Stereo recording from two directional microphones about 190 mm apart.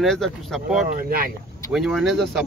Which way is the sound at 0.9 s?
50° right (ahead or behind).